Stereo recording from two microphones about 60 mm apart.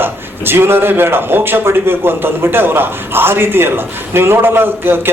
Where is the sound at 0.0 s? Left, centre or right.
Right.